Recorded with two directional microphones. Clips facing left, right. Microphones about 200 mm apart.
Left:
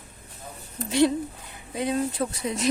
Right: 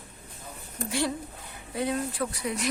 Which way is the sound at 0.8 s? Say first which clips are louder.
Left 8 dB; 20° left (ahead or behind).